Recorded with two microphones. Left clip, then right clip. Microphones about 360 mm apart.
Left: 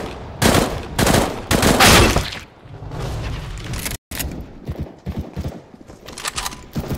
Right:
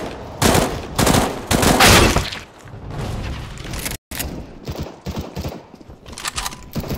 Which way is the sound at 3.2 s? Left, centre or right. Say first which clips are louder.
Even; centre.